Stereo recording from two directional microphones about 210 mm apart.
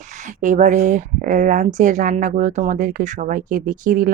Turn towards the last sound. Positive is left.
turn(degrees=-40)  # may be behind; listen again after turning